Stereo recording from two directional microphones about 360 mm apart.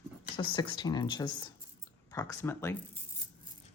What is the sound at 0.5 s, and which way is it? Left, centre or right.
Speech, centre.